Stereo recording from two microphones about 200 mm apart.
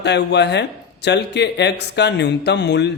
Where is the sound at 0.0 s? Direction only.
60° left (ahead or behind).